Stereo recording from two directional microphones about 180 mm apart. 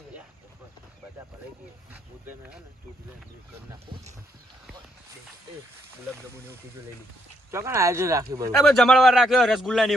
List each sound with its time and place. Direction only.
1.9 s speech: 10° right (ahead or behind)
7.5 s speech: 15° right (ahead or behind)
8.5 s a man's voice: centre (ahead or behind)